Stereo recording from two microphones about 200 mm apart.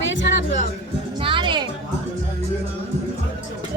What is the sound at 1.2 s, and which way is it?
Music, 25° right (ahead or behind).